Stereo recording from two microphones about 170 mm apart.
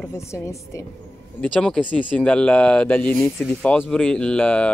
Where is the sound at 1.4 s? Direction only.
5° left (ahead or behind).